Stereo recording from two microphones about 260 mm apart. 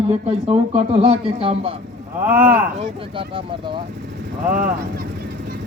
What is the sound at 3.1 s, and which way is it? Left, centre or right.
Speech, centre.